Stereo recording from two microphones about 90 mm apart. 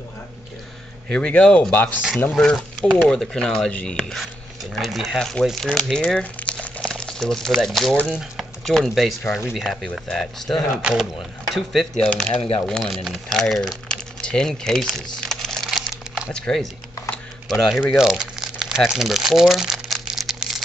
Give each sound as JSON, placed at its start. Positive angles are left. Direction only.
{"t": 1.0, "sound": "speech", "side_deg": 15}
{"t": 2.3, "sound": "speech", "side_deg": 5}
{"t": 10.8, "sound": "speech", "side_deg": -10}
{"t": 12.4, "sound": "speech", "side_deg": 90}
{"t": 12.6, "sound": "typing", "side_deg": 5}
{"t": 16.3, "sound": "speech", "side_deg": 10}
{"t": 17.5, "sound": "speech", "side_deg": 0}
{"t": 17.9, "sound": "crumpling", "side_deg": -5}